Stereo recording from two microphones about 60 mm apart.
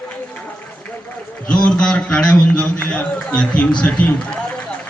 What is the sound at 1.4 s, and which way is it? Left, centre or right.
A man's voice, centre.